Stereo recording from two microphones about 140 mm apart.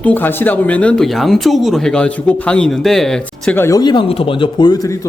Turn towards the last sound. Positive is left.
turn(degrees=25)  # may be behind; listen again after turning